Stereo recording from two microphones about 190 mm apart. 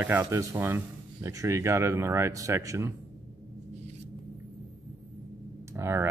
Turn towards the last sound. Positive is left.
turn(degrees=-15)  # may be behind; listen again after turning